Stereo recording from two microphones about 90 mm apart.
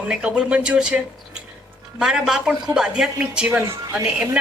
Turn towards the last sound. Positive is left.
turn(degrees=-10)  # may be behind; listen again after turning